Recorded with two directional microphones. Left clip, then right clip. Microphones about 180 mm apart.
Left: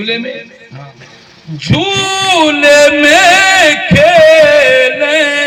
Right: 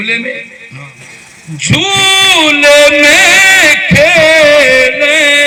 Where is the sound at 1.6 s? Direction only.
30° left (ahead or behind).